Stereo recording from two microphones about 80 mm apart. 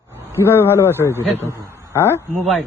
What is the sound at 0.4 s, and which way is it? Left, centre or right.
Speech, left.